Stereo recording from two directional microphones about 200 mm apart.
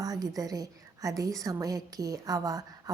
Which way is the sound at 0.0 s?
20° right (ahead or behind).